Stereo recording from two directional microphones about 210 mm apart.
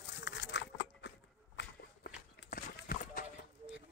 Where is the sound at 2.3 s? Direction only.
55° left (ahead or behind).